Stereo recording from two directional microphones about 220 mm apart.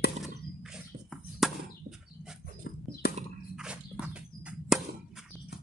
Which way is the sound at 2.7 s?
50° left (ahead or behind).